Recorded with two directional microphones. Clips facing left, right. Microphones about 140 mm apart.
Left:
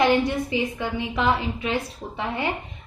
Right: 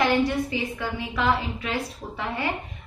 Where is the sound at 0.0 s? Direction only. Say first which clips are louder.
Left 2 dB; 20° left (ahead or behind).